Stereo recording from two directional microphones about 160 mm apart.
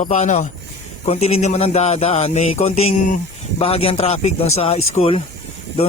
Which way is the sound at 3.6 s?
35° left (ahead or behind).